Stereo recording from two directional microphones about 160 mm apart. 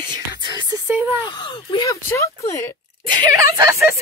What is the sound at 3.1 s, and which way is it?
Speech, 20° right (ahead or behind).